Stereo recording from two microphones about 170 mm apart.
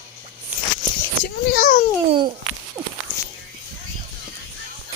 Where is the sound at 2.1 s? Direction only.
30° right (ahead or behind).